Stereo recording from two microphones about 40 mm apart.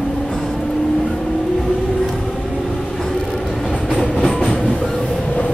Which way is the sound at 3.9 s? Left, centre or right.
Centre.